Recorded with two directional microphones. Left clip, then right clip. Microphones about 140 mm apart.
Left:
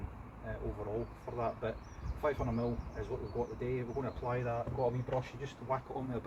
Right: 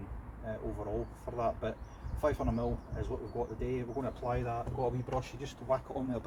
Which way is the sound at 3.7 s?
55° right (ahead or behind).